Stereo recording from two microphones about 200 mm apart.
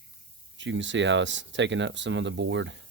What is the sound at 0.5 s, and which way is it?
Speech, 70° right (ahead or behind).